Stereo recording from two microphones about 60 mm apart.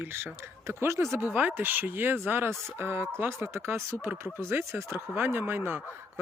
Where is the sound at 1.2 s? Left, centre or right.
Right.